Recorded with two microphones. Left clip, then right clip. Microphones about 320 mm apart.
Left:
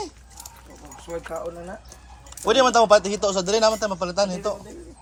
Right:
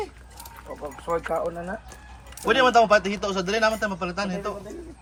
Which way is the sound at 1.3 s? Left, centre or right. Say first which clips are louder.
Right 4 dB; centre.